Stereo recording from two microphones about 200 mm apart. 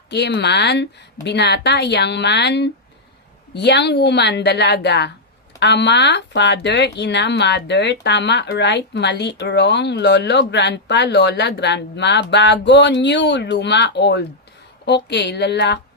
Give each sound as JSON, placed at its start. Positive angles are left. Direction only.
{"t": 0.1, "sound": "speech", "side_deg": 55}